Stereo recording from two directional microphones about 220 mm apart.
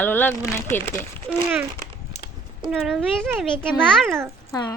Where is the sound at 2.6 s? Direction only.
Centre (ahead or behind).